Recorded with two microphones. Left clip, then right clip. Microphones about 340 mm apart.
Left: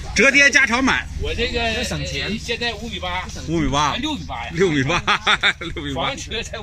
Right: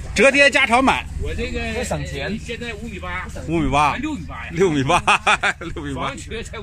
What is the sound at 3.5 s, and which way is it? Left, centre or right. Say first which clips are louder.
Speech: right 2 dB; centre.